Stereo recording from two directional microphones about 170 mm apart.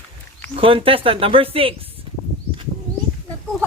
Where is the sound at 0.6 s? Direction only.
30° right (ahead or behind).